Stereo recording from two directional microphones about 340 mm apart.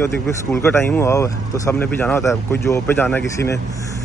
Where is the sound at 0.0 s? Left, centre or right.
Centre.